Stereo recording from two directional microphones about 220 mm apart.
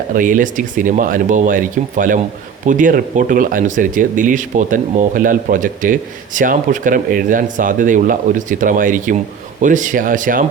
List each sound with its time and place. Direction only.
0.1 s speech: 40° right (ahead or behind)